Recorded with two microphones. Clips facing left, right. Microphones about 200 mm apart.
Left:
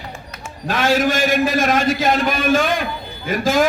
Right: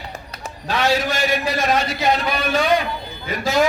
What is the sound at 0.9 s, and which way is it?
A man's voice, 50° left (ahead or behind).